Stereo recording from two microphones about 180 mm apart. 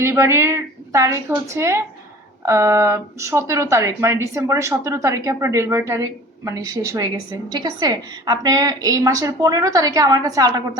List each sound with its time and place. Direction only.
0.0 s a woman's voice: 15° right (ahead or behind)